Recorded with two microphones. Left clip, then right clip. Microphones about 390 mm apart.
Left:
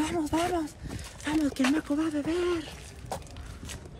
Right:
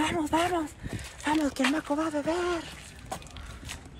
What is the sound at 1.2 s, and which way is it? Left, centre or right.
Speech, centre.